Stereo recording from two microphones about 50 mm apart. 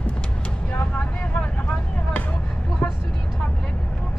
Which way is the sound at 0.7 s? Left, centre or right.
Left.